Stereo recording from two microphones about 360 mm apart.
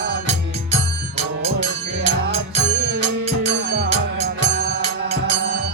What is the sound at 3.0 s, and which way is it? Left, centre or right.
Music, centre.